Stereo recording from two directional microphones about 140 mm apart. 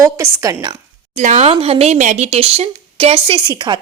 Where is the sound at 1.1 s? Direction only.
60° right (ahead or behind).